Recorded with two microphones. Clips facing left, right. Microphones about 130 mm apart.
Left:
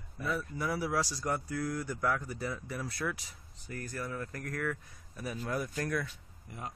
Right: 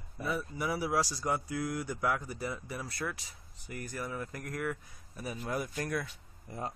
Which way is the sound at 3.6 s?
15° right (ahead or behind).